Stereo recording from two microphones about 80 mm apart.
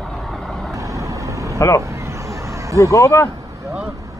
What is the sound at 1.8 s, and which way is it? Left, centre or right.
Vehicle, right.